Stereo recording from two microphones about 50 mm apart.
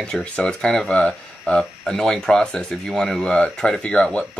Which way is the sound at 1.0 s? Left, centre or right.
Left.